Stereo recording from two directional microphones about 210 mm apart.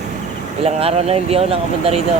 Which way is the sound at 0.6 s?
30° right (ahead or behind).